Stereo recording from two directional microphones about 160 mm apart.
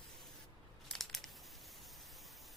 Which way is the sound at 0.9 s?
Centre (ahead or behind).